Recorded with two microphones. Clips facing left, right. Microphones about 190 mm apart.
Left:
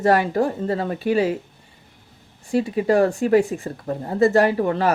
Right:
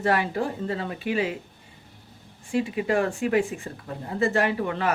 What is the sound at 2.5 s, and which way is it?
Speech, 40° left (ahead or behind).